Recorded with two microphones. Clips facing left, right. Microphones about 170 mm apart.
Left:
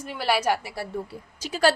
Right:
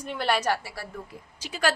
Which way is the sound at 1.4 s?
40° left (ahead or behind).